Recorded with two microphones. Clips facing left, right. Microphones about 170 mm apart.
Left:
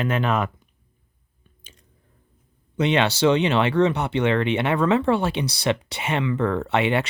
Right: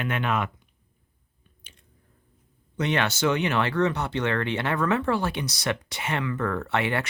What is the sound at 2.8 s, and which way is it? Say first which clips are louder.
Speech: left 5 dB; 20° left (ahead or behind).